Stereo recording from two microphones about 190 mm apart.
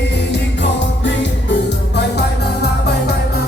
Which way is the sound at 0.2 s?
65° left (ahead or behind).